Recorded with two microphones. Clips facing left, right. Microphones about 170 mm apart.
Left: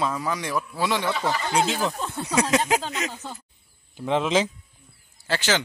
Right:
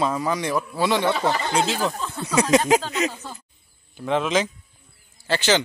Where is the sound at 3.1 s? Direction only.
15° left (ahead or behind).